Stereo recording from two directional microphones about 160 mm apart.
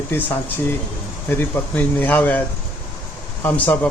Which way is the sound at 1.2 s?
15° left (ahead or behind).